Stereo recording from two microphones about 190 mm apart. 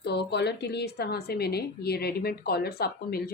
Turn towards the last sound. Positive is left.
turn(degrees=55)  # may be behind; listen again after turning